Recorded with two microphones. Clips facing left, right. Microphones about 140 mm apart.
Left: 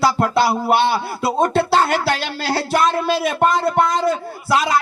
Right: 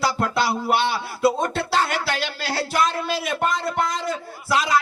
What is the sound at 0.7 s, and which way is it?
Music, 60° left (ahead or behind).